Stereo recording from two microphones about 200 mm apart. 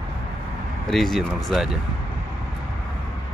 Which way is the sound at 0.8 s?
Centre (ahead or behind).